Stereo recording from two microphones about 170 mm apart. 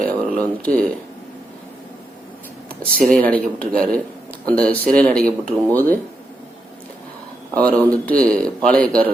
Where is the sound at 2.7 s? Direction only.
55° right (ahead or behind).